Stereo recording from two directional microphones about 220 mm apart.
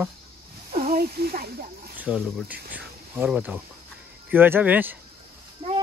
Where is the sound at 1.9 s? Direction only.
5° right (ahead or behind).